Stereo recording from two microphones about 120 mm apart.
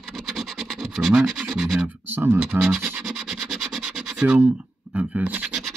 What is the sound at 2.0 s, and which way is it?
Speech, 20° right (ahead or behind).